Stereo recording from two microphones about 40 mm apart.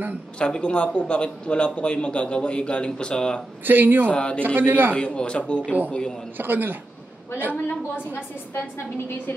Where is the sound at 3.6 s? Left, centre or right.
Right.